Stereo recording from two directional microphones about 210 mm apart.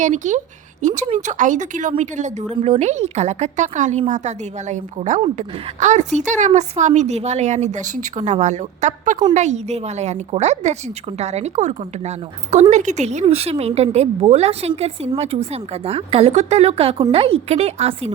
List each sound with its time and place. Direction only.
0.0 s a woman's voice: 35° right (ahead or behind)